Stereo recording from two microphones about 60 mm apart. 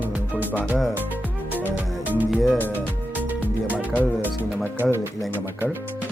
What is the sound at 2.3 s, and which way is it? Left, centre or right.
Music, centre.